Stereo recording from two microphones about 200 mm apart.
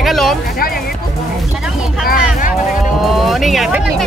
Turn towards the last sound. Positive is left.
turn(degrees=0)  # may be behind; listen again after turning